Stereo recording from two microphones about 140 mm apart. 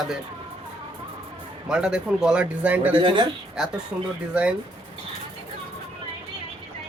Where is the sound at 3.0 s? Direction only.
35° right (ahead or behind).